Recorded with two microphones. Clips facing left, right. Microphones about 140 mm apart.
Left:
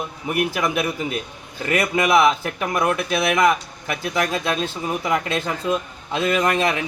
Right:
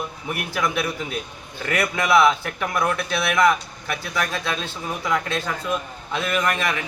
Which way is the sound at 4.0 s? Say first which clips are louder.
Left 5 dB; 20° left (ahead or behind).